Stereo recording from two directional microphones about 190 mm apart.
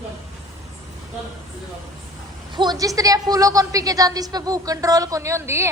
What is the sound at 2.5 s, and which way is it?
A woman's voice, 20° right (ahead or behind).